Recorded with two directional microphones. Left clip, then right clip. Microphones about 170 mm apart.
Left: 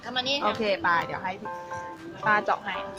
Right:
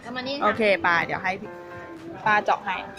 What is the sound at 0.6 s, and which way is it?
Speech, 15° right (ahead or behind).